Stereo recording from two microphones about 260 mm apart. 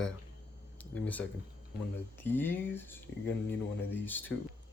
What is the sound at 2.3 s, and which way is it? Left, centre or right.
Speech, centre.